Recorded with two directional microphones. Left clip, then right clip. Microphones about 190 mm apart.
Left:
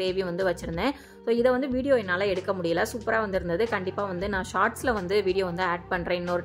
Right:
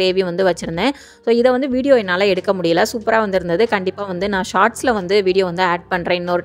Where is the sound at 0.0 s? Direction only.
45° right (ahead or behind).